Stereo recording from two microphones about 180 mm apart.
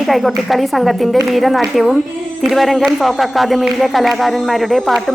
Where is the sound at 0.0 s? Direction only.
Centre (ahead or behind).